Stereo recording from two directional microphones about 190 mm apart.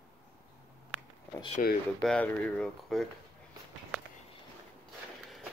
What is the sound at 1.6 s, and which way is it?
Speech, 40° left (ahead or behind).